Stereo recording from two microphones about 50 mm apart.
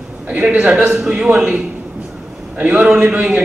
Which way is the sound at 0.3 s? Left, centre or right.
Right.